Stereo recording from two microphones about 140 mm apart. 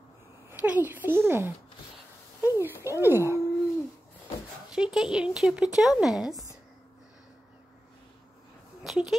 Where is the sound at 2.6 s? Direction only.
15° right (ahead or behind).